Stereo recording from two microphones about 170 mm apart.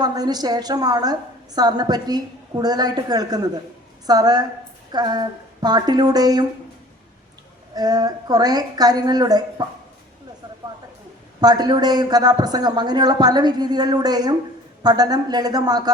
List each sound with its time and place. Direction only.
0.0 s a man's voice: 25° right (ahead or behind)
7.8 s a man's voice: 25° right (ahead or behind)
11.3 s a man's voice: 25° right (ahead or behind)